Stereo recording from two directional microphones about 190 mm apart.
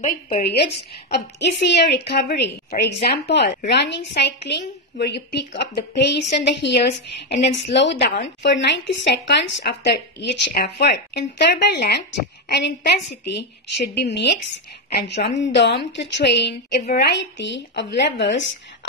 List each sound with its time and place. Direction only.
0.0 s a woman's voice: 45° left (ahead or behind); by 18.6 s 70° left (ahead or behind)